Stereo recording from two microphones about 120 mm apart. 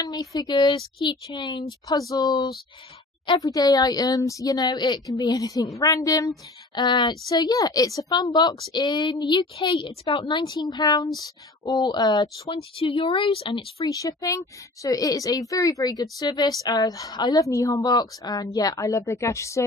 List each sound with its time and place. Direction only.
0.0 s a woman's voice: 30° left (ahead or behind)
12.7 s a woman's voice: 50° left (ahead or behind)
13.8 s a child's voice: 30° left (ahead or behind)